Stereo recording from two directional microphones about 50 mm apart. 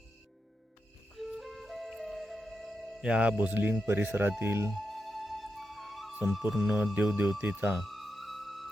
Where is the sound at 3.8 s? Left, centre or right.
Right.